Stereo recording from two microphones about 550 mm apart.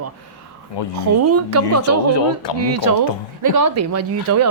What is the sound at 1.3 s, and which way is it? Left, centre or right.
Speech, right.